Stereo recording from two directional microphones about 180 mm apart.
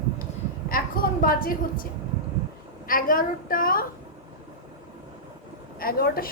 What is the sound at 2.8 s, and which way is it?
A woman's voice, 50° left (ahead or behind).